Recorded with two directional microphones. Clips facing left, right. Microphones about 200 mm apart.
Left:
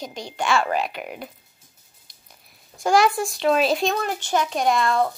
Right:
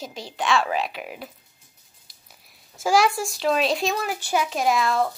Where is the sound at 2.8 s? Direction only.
Centre (ahead or behind).